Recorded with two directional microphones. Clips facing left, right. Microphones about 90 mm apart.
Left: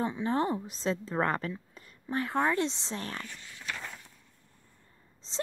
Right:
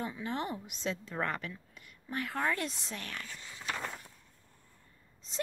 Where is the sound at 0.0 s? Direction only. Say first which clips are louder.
Left 7 dB; 30° left (ahead or behind).